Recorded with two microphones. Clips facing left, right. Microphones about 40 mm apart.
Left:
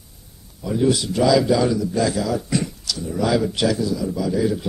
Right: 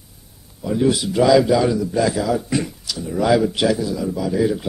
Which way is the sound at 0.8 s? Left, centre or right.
Centre.